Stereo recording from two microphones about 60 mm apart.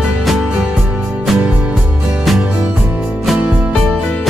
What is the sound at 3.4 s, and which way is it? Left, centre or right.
Music, centre.